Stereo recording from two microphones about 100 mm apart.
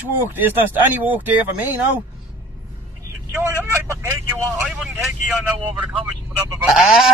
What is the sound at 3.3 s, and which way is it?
Speech, 25° right (ahead or behind).